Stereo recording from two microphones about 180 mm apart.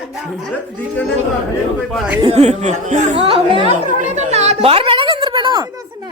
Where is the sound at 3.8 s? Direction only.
40° right (ahead or behind).